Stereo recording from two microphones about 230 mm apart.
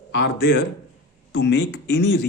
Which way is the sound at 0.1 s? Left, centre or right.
Left.